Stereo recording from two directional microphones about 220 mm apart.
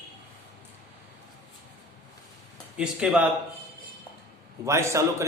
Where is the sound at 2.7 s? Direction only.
5° right (ahead or behind).